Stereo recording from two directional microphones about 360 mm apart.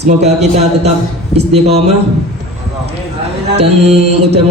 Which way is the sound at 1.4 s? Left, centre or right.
Centre.